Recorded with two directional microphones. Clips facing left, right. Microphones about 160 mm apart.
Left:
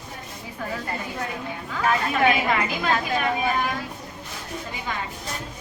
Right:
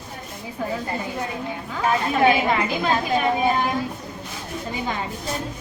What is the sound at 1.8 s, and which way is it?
A woman's voice, 25° right (ahead or behind).